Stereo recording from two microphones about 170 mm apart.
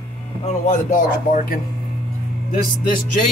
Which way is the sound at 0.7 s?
50° left (ahead or behind).